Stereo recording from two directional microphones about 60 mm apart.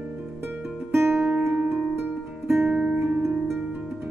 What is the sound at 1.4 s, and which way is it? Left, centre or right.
Music, right.